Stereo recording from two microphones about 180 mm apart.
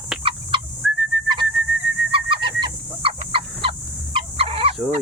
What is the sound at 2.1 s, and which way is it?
Fowl, 30° right (ahead or behind).